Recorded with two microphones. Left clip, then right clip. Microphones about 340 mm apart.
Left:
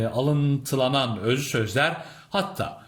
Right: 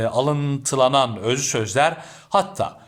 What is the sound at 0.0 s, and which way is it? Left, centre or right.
Speech, right.